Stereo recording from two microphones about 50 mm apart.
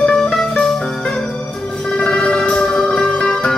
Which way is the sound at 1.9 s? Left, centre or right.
Centre.